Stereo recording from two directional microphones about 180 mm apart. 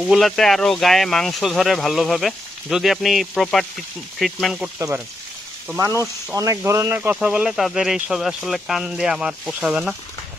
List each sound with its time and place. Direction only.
0.0 s speech: centre (ahead or behind)
4.7 s speech: 15° right (ahead or behind)
6.3 s speech: 20° right (ahead or behind)